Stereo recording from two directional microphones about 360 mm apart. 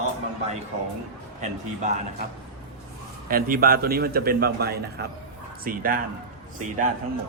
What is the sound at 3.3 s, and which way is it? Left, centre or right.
A man's voice, right.